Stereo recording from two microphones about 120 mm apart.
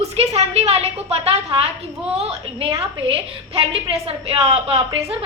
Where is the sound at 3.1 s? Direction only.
50° right (ahead or behind).